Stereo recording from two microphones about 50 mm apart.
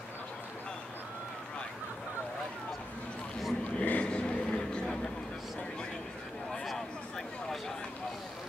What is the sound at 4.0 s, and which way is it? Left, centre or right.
Vehicle, centre.